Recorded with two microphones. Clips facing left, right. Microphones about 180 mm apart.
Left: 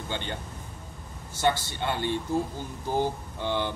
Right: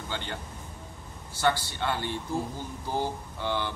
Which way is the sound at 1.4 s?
20° left (ahead or behind).